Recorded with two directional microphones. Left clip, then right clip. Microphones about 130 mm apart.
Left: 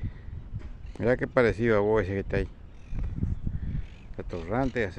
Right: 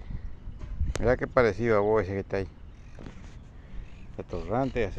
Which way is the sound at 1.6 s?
35° left (ahead or behind).